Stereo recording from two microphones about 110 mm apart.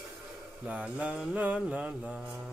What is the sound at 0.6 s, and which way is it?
Mantra, 10° right (ahead or behind).